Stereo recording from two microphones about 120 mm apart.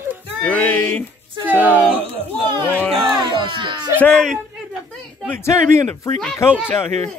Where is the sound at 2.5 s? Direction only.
20° left (ahead or behind).